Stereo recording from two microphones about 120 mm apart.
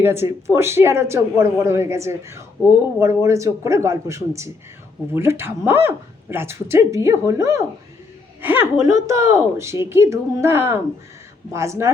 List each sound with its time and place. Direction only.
0.0 s speech: 20° right (ahead or behind)